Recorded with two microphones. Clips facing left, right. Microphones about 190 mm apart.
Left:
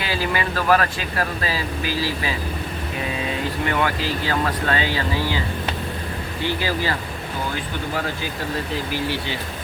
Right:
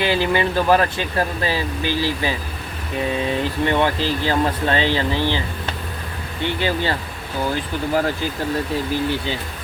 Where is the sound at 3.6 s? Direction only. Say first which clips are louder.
Right 4 dB; 25° right (ahead or behind).